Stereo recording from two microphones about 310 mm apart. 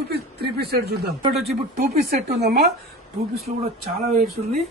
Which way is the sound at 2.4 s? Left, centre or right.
Right.